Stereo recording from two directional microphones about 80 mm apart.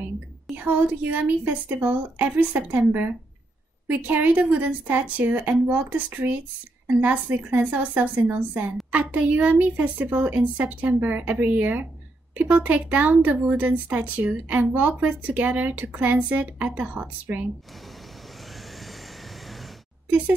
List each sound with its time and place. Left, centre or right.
0.6 s speech: right
20.1 s speech: centre